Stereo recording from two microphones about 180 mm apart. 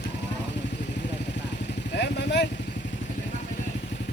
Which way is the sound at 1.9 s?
70° left (ahead or behind).